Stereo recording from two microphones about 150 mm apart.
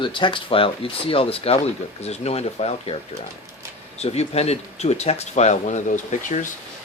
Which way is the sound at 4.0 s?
45° left (ahead or behind).